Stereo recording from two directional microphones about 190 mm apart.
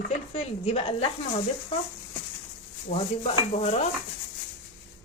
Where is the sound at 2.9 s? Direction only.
30° left (ahead or behind).